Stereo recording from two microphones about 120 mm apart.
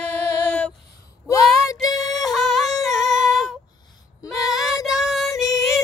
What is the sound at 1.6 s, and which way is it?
Music, 30° left (ahead or behind).